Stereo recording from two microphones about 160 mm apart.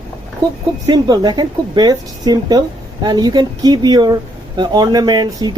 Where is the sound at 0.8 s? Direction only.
25° right (ahead or behind).